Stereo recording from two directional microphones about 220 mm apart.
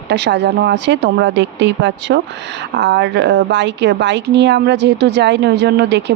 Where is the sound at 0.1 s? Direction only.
50° right (ahead or behind).